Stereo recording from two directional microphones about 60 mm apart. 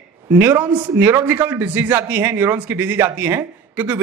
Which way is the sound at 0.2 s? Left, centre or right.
Right.